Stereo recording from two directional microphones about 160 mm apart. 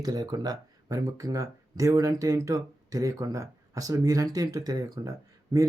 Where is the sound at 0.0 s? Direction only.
25° right (ahead or behind).